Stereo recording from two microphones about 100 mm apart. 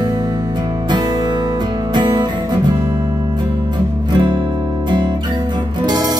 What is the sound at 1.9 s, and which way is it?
Music, 50° right (ahead or behind).